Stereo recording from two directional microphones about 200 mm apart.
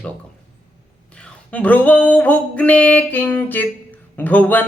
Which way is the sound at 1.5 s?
5° left (ahead or behind).